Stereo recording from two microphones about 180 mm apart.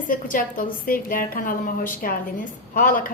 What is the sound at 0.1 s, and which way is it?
A woman's voice, 50° left (ahead or behind).